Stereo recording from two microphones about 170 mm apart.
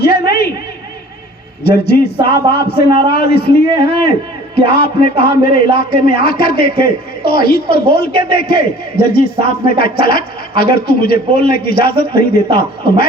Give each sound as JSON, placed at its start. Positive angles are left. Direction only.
{"t": 0.0, "sound": "a sound", "side_deg": 70}
{"t": 1.6, "sound": "a man's voice", "side_deg": 75}
{"t": 2.8, "sound": "a man's voice", "side_deg": -25}
{"t": 3.1, "sound": "a man's voice", "side_deg": 70}
{"t": 4.6, "sound": "a man's voice", "side_deg": 70}